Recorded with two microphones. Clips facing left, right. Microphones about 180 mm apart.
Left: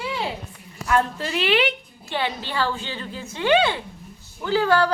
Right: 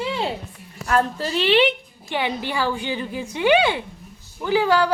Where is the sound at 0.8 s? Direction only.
35° right (ahead or behind).